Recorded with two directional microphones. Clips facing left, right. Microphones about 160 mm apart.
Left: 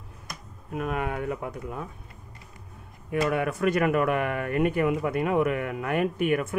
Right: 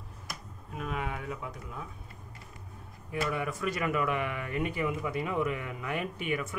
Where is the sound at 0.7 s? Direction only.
55° left (ahead or behind).